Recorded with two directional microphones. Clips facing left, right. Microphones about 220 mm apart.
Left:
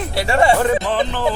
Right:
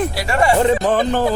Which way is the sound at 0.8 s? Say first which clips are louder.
Right 4 dB; 45° right (ahead or behind).